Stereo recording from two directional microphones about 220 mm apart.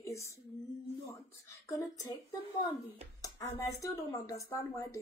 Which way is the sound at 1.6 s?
15° left (ahead or behind).